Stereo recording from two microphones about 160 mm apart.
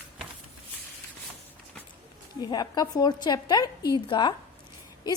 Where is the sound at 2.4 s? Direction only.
25° left (ahead or behind).